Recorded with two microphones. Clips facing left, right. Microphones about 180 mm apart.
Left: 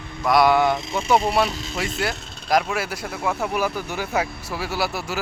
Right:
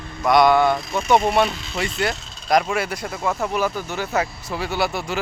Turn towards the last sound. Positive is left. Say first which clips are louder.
# right 2 dB
turn(degrees=5)  # may be behind; listen again after turning